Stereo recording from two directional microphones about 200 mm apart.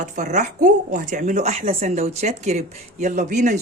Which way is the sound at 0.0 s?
40° right (ahead or behind).